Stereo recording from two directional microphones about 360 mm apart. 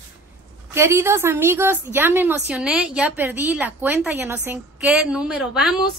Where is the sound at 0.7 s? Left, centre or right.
Centre.